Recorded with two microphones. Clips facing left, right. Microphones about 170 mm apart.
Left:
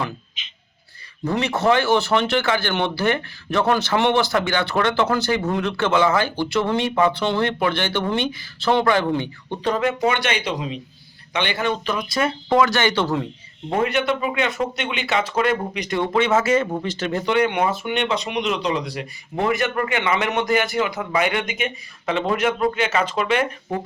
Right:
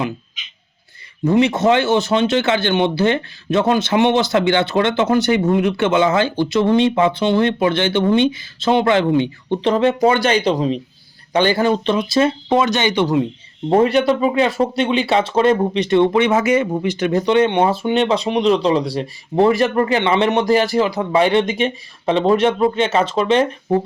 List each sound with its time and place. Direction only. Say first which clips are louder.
1.2 s speech: right 6 dB; 20° right (ahead or behind)
13.7 s speech: right 7 dB; 35° right (ahead or behind)